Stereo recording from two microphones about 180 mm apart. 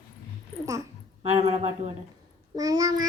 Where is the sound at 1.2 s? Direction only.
35° right (ahead or behind).